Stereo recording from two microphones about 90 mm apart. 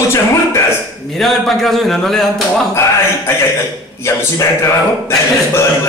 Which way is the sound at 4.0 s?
30° left (ahead or behind).